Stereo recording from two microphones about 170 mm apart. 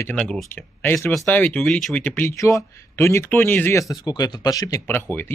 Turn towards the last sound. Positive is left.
turn(degrees=10)  # may be behind; listen again after turning